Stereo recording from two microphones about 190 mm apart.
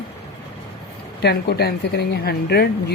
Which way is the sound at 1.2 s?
55° left (ahead or behind).